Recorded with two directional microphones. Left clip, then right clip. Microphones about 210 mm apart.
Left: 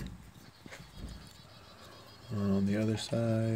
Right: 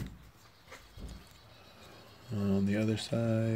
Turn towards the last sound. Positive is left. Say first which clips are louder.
# even
turn(degrees=-10)  # may be behind; listen again after turning